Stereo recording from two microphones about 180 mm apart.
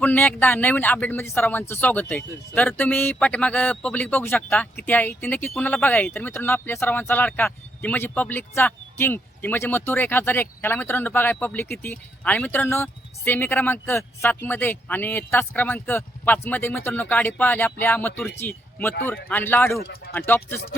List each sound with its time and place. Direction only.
0.0 s speech: 10° left (ahead or behind)
19.8 s speech: 60° left (ahead or behind)
20.1 s speech: 10° left (ahead or behind)